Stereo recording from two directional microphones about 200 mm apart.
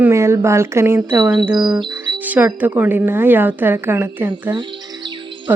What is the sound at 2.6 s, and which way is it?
Speech, 10° right (ahead or behind).